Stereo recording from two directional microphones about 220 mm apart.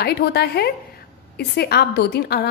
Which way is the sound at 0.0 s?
45° left (ahead or behind).